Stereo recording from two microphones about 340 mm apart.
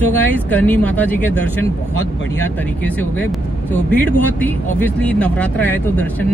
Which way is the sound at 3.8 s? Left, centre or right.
Centre.